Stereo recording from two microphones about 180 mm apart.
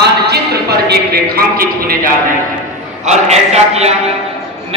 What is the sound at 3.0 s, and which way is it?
Speech, 40° right (ahead or behind).